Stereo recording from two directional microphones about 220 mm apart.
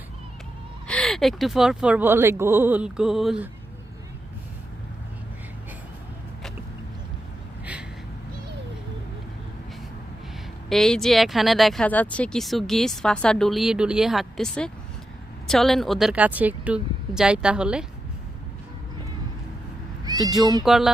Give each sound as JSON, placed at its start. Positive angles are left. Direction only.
{"t": 0.9, "sound": "speech", "side_deg": 5}
{"t": 7.6, "sound": "a sound", "side_deg": -5}
{"t": 10.7, "sound": "speech", "side_deg": 0}
{"t": 20.1, "sound": "cat", "side_deg": -15}
{"t": 20.7, "sound": "speech", "side_deg": 0}